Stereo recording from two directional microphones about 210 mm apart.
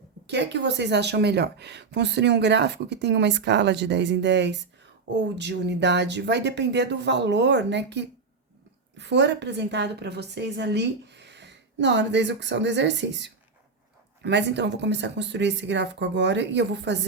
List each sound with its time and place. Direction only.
0.3 s speech: 55° right (ahead or behind)